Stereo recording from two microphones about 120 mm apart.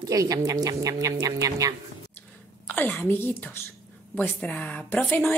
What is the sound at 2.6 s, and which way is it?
A woman's voice, 15° left (ahead or behind).